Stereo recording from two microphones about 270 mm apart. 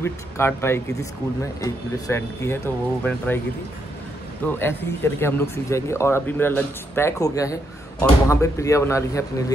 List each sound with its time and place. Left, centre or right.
0.0 s speech: centre
4.5 s speech: centre